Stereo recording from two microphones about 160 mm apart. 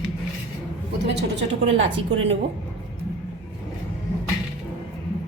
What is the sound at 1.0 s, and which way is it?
Speech, 90° right.